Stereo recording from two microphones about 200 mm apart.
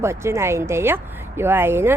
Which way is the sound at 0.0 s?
15° right (ahead or behind).